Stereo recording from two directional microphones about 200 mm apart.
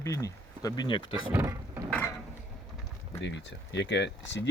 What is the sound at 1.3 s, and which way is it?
Speech, 10° right (ahead or behind).